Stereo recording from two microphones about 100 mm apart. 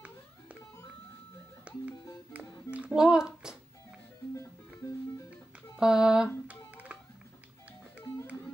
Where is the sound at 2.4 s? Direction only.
30° left (ahead or behind).